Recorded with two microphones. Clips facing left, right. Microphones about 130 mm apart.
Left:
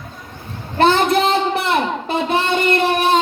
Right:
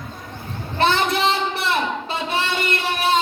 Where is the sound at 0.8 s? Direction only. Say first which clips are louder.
Left 5 dB; 50° left (ahead or behind).